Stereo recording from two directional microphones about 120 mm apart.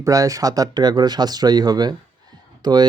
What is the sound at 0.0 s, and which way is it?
Speech, 30° right (ahead or behind).